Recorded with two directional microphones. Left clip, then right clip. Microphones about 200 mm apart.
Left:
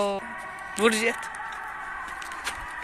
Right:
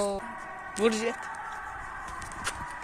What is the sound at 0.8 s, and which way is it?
Speech, centre (ahead or behind).